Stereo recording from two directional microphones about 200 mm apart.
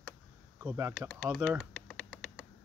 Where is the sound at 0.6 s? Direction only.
10° right (ahead or behind).